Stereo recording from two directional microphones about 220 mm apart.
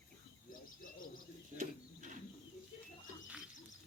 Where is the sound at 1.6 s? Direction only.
35° right (ahead or behind).